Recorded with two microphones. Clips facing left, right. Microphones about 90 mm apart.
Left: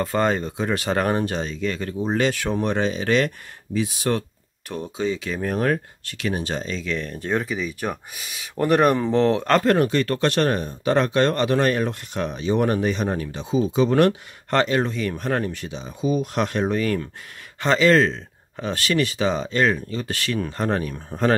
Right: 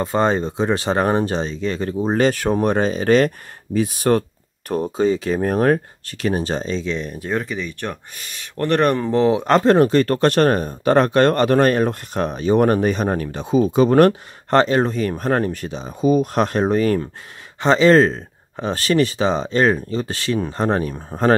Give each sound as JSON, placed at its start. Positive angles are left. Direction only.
{"t": 0.0, "sound": "speech", "side_deg": -25}
{"t": 7.1, "sound": "speech", "side_deg": -5}
{"t": 9.4, "sound": "speech", "side_deg": -25}